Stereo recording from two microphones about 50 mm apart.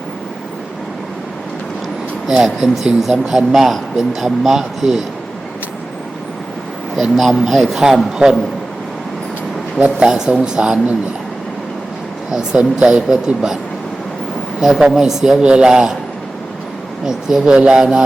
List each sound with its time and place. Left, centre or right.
2.4 s speech: centre
6.9 s speech: centre
9.7 s a sound: right
10.1 s a woman's voice: centre
12.3 s a woman's voice: centre
14.6 s a woman's voice: centre
17.1 s a woman's voice: centre